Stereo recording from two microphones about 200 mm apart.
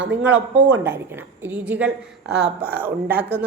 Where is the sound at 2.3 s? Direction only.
55° right (ahead or behind).